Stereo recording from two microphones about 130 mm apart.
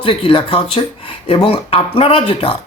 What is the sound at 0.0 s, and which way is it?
A man's voice, 45° left (ahead or behind).